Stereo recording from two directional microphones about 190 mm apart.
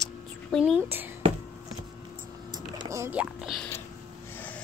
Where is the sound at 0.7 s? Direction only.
10° right (ahead or behind).